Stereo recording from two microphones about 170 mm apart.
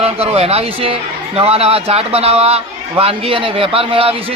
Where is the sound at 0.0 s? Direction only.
35° right (ahead or behind).